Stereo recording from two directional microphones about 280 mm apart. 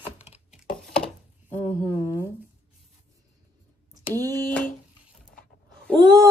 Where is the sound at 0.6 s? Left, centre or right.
Centre.